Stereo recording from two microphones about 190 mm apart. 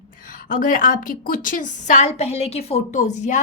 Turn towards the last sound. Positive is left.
turn(degrees=40)  # may be behind; listen again after turning